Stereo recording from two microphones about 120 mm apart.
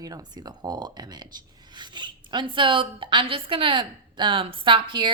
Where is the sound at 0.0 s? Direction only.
30° right (ahead or behind).